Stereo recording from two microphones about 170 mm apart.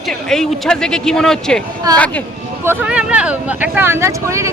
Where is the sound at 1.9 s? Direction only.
20° right (ahead or behind).